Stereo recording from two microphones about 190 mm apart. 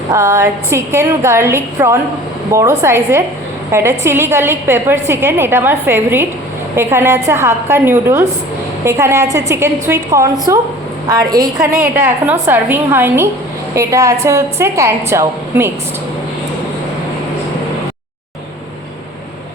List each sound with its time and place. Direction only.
0.1 s a woman's voice: 15° right (ahead or behind)
11.8 s a woman's voice: 10° right (ahead or behind)